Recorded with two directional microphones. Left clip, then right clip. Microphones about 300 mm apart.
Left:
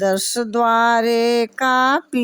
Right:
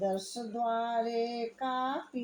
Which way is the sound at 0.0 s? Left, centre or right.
Left.